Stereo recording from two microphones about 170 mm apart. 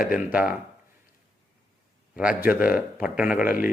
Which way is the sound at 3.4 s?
55° left (ahead or behind).